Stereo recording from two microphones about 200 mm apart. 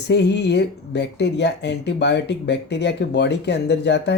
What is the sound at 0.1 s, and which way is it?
Speech, 60° left (ahead or behind).